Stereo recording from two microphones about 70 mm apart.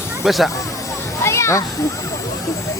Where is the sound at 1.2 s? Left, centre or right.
Left.